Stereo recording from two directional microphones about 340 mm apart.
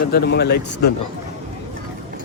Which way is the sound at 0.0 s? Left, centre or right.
Left.